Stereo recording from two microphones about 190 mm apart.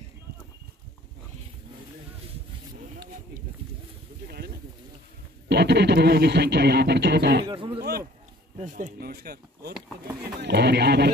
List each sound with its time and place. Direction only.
5.5 s speech: 60° right (ahead or behind)
7.4 s a sound: 25° right (ahead or behind)
8.5 s speech: 40° right (ahead or behind); by 11.1 s 60° right (ahead or behind)